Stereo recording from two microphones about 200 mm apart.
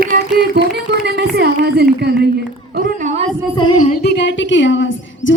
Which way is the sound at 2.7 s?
40° right (ahead or behind).